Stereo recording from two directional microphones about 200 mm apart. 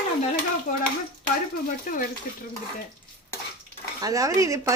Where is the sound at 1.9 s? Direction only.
45° left (ahead or behind).